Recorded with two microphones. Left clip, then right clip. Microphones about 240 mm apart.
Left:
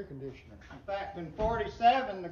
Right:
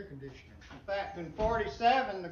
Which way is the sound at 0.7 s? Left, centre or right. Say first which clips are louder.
Right 1 dB; centre.